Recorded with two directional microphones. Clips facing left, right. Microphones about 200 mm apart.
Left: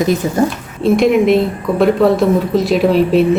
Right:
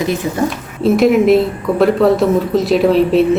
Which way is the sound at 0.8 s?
5° right (ahead or behind).